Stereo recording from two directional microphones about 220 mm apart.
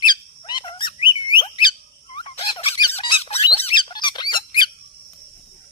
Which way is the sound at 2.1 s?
25° left (ahead or behind).